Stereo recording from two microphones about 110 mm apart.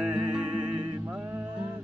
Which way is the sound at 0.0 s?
10° right (ahead or behind).